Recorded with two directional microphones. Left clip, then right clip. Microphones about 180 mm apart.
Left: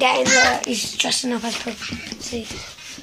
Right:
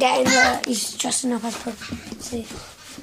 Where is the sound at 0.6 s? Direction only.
20° left (ahead or behind).